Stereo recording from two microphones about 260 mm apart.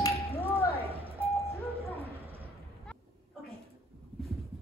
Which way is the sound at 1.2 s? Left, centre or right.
Centre.